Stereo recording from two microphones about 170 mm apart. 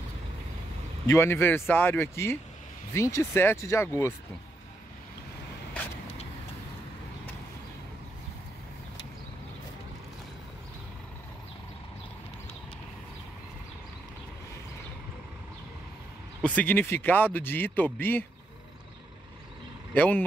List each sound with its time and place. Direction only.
1.0 s speech: 15° left (ahead or behind)
16.4 s speech: 10° left (ahead or behind)
19.9 s speech: 10° left (ahead or behind)